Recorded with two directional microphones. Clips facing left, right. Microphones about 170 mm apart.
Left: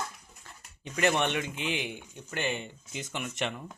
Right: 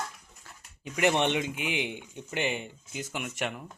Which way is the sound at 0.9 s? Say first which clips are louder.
Right 2 dB; 15° right (ahead or behind).